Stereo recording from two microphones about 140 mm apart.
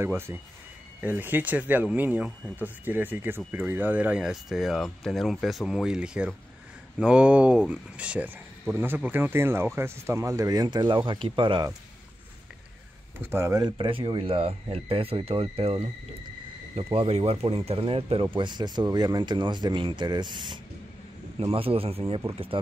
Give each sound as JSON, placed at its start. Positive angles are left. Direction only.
{"t": 0.0, "sound": "speech", "side_deg": -15}
{"t": 13.2, "sound": "speech", "side_deg": -20}